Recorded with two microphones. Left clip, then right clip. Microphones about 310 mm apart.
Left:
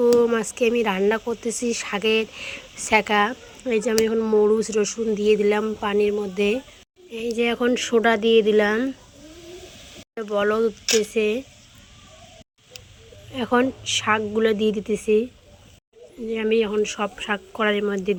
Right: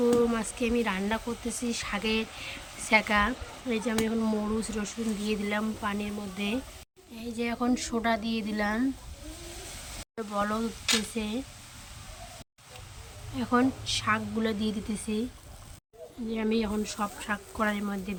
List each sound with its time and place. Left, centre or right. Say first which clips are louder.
0.3 s speech: left 9 dB; centre
10.2 s speech: left 10 dB; centre
13.3 s speech: left 6 dB; centre
16.3 s speech: left 10 dB; centre